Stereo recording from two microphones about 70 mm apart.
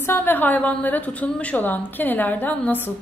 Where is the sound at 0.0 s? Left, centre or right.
Left.